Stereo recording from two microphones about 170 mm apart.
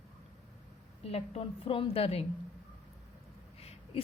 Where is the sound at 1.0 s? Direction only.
35° left (ahead or behind).